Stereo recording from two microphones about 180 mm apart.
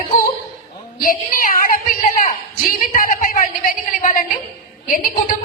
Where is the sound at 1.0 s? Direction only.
50° left (ahead or behind).